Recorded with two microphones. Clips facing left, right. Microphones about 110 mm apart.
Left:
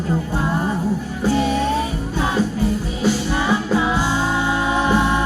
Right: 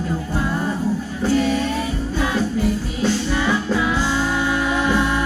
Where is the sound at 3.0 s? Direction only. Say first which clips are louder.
Even; 20° left (ahead or behind).